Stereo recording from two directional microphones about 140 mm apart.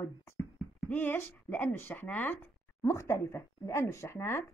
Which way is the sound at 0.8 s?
15° left (ahead or behind).